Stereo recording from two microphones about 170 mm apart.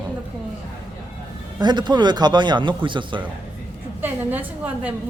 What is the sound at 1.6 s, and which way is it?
Speech, 25° right (ahead or behind).